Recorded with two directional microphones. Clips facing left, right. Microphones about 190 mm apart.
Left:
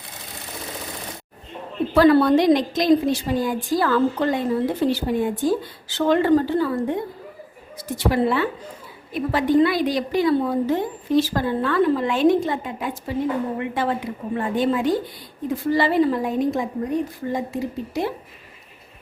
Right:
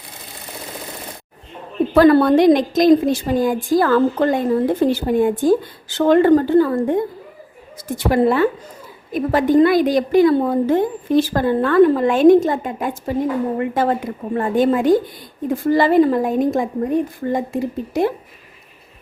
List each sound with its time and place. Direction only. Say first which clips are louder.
2.0 s a woman's voice: right 3 dB; 50° right (ahead or behind)